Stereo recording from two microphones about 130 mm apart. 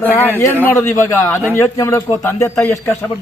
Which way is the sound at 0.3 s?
15° left (ahead or behind).